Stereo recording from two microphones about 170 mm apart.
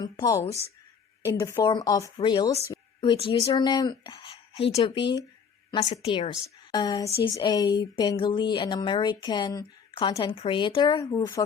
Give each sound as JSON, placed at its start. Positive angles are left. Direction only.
{"t": 0.0, "sound": "a woman's voice", "side_deg": 20}